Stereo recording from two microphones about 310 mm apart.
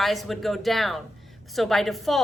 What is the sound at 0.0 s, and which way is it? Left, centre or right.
Speech, centre.